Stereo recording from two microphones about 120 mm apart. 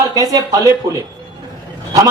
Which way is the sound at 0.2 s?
30° right (ahead or behind).